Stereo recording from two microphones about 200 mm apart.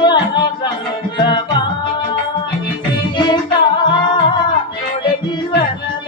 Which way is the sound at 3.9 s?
25° left (ahead or behind).